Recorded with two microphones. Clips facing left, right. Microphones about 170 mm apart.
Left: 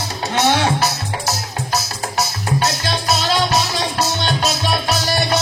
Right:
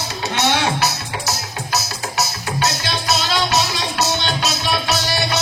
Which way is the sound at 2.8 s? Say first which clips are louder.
Left 2 dB; 40° left (ahead or behind).